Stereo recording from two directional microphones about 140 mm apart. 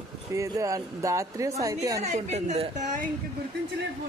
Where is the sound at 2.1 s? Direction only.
55° right (ahead or behind).